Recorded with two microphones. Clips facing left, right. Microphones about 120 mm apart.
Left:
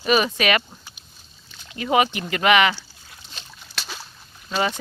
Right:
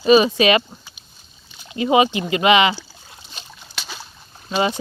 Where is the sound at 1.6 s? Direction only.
20° right (ahead or behind).